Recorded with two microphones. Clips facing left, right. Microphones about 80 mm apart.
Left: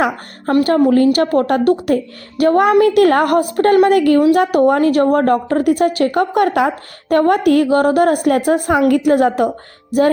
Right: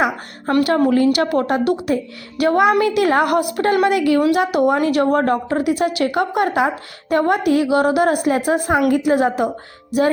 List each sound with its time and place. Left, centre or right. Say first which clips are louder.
0.5 s a woman's voice: left 3 dB; left